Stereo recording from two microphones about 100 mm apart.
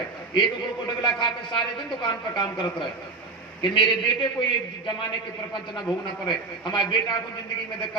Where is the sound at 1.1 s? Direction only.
55° left (ahead or behind).